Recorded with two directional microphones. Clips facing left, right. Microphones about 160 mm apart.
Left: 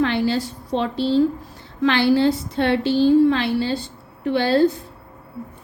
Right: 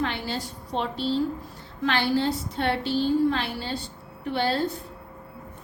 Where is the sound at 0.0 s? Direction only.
90° left.